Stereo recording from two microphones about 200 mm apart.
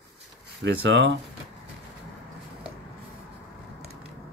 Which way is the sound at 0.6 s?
60° right (ahead or behind).